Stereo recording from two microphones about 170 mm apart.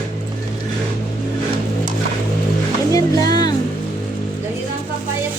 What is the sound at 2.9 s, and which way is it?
Music, 20° left (ahead or behind).